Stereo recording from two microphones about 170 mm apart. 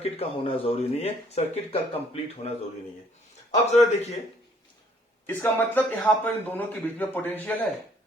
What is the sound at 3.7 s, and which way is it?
Speech, 40° left (ahead or behind).